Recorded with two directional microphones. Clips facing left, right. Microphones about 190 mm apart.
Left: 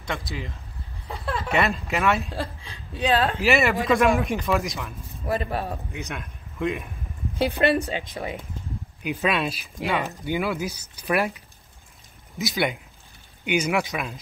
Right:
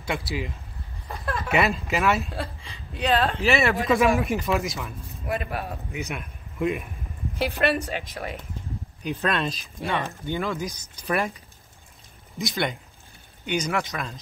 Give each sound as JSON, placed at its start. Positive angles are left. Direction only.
{"t": 0.0, "sound": "speech", "side_deg": -5}
{"t": 1.5, "sound": "speech", "side_deg": 0}
{"t": 5.2, "sound": "a woman's voice", "side_deg": 30}
{"t": 6.0, "sound": "speech", "side_deg": -5}
{"t": 7.3, "sound": "a woman's voice", "side_deg": 25}
{"t": 9.0, "sound": "speech", "side_deg": 5}